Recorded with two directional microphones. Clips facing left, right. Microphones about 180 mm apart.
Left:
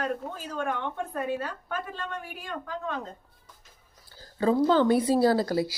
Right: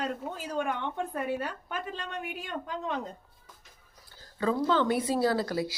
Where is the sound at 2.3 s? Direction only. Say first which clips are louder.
Even; 20° right (ahead or behind).